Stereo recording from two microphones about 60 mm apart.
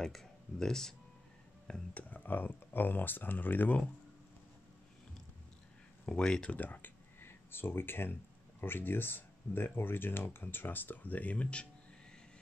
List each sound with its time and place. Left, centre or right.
0.0 s speech: centre
2.0 s speech: left
6.0 s speech: centre